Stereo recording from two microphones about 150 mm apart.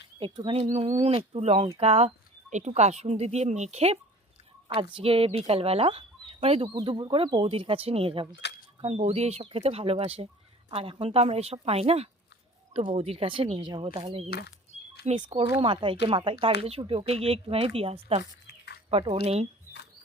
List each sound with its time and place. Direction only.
0.2 s speech: 35° right (ahead or behind)
6.7 s speech: 30° right (ahead or behind)
14.3 s speech: 90° left
15.1 s speech: 45° right (ahead or behind)
15.5 s speech: 35° right (ahead or behind)
18.4 s a sound: 90° left
18.9 s speech: 40° right (ahead or behind)